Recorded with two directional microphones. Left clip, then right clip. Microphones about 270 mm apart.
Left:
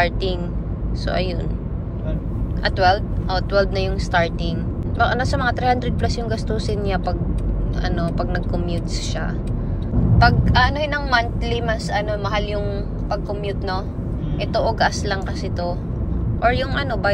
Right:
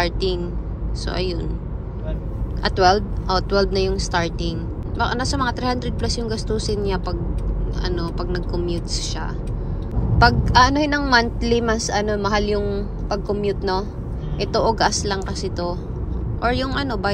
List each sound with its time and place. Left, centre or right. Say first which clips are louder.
0.0 s speech: left 1 dB; centre
2.6 s speech: right 1 dB; right
10.1 s speech: right 2 dB; right